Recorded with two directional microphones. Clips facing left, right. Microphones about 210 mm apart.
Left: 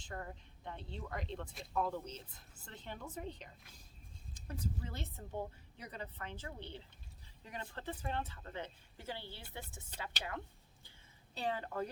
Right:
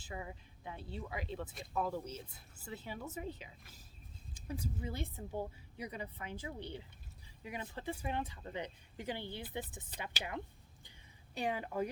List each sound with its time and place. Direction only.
0.0 s speech: 5° right (ahead or behind)